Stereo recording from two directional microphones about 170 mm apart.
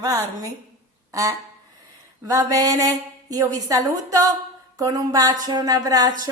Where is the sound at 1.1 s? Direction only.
20° right (ahead or behind).